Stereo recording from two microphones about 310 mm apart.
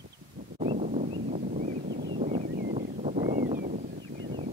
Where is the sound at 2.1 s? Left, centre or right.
Centre.